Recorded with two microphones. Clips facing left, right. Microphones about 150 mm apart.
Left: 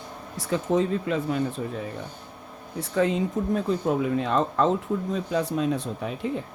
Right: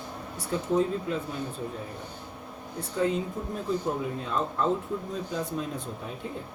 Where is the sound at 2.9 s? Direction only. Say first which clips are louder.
Left 4 dB; 90° left.